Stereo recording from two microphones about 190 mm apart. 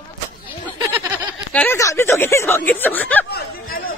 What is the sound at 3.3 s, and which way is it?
Chatter, 50° left (ahead or behind).